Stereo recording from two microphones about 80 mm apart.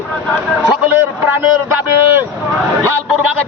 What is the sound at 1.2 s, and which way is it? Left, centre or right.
A man's voice, right.